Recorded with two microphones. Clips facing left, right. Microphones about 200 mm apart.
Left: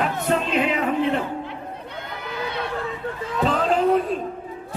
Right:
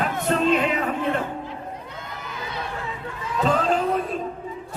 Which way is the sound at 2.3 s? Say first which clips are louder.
Left 5 dB; 65° left (ahead or behind).